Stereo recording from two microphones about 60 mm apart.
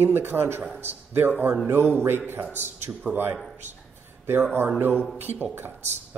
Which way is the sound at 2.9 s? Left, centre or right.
Right.